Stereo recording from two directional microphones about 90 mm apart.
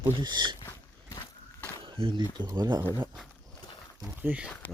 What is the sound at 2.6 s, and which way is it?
Speech, 55° right (ahead or behind).